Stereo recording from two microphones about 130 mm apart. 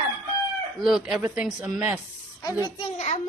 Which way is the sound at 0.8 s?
5° right (ahead or behind).